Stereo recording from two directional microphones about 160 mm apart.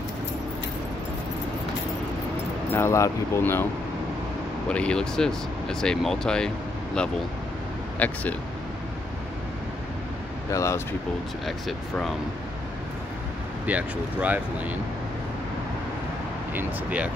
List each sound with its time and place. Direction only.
2.7 s speech: 15° left (ahead or behind)
4.6 s speech: 5° left (ahead or behind)
10.5 s speech: 20° left (ahead or behind)
11.4 s speech: centre (ahead or behind)
13.7 s speech: 10° right (ahead or behind)
16.5 s speech: 10° right (ahead or behind)